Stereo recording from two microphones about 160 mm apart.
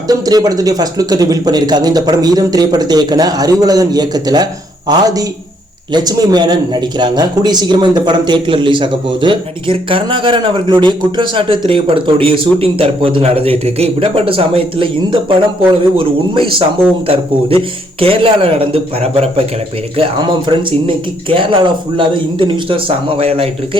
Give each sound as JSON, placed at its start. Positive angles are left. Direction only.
{"t": 0.1, "sound": "a man's voice", "side_deg": -25}
{"t": 20.5, "sound": "a man's voice", "side_deg": -30}